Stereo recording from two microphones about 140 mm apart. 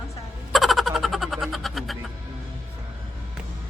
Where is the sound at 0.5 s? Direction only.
Centre (ahead or behind).